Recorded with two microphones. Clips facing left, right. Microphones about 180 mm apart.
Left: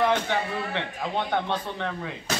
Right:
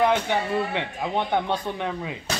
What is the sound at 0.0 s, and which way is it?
Speech, 15° right (ahead or behind).